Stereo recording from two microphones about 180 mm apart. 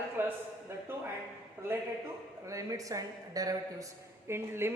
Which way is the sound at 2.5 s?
20° right (ahead or behind).